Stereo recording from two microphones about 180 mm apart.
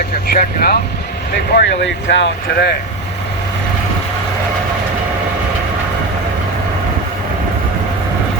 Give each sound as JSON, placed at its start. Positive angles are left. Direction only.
{"t": 0.3, "sound": "speech", "side_deg": 60}
{"t": 1.5, "sound": "speech", "side_deg": 85}